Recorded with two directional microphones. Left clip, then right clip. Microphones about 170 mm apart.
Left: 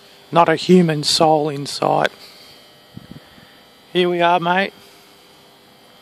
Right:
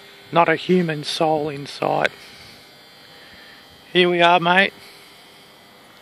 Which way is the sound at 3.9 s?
5° left (ahead or behind).